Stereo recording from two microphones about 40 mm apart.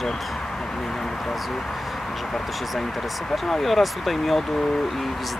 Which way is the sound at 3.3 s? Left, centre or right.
Centre.